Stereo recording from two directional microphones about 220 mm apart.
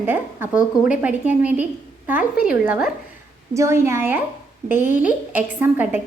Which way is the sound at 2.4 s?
5° right (ahead or behind).